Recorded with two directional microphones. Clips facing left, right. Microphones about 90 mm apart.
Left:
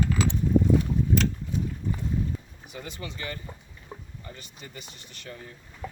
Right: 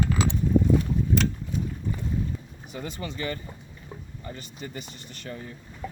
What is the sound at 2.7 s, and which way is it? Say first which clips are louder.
Speech: right 4 dB; 40° right (ahead or behind).